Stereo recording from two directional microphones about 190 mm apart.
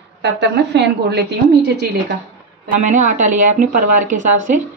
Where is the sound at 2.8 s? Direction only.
40° right (ahead or behind).